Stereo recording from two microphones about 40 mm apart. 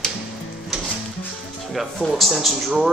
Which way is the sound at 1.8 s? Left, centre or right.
Centre.